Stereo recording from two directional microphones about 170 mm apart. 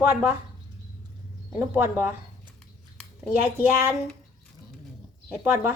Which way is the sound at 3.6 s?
10° right (ahead or behind).